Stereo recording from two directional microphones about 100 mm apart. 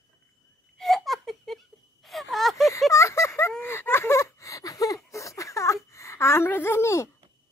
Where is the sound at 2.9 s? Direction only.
30° left (ahead or behind).